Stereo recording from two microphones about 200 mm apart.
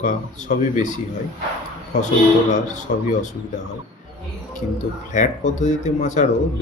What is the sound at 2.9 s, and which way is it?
Speech, 40° left (ahead or behind).